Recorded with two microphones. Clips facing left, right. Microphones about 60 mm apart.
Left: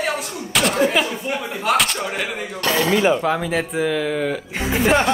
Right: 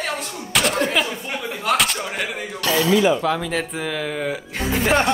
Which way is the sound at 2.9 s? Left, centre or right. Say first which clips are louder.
Even; left.